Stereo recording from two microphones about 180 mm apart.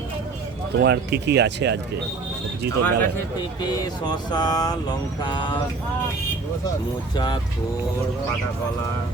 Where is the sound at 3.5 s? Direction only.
20° left (ahead or behind).